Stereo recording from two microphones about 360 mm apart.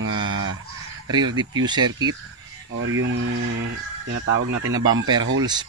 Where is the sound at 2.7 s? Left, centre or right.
Right.